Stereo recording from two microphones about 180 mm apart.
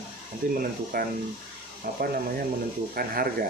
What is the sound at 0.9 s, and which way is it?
Speech, 55° right (ahead or behind).